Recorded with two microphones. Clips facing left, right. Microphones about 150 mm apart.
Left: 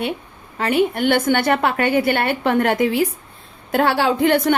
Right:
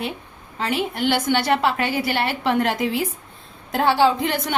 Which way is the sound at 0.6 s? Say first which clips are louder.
Left 5 dB; 55° left (ahead or behind).